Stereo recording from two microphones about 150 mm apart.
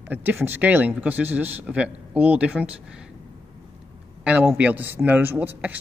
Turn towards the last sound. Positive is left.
turn(degrees=-10)  # may be behind; listen again after turning